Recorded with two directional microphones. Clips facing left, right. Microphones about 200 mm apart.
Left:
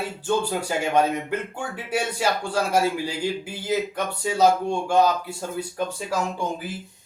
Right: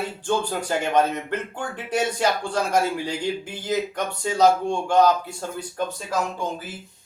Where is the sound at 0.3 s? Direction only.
10° left (ahead or behind).